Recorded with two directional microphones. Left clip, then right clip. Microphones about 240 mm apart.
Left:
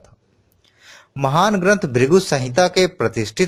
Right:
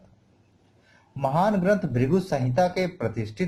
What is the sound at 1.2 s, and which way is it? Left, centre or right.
Speech, left.